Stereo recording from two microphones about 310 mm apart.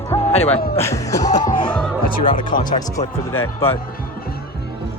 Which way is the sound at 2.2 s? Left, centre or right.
Left.